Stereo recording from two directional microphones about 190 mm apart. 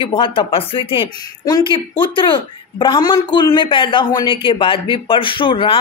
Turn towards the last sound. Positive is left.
turn(degrees=25)  # may be behind; listen again after turning